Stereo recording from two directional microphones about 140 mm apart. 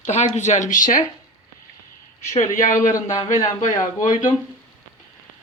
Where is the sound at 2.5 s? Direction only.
65° left (ahead or behind).